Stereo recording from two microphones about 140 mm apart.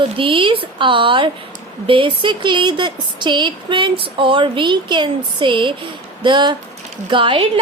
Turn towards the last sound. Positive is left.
turn(degrees=-35)  # may be behind; listen again after turning